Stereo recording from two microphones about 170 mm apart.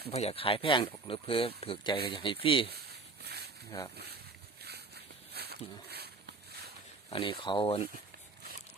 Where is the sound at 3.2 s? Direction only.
70° right (ahead or behind).